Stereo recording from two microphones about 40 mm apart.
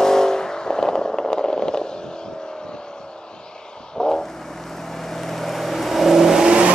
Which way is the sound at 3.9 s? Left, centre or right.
Centre.